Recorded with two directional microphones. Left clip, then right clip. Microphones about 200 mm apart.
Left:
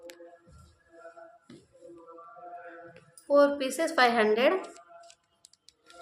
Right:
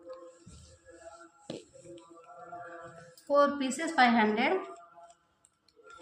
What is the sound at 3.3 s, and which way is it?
A woman's voice, 35° left (ahead or behind).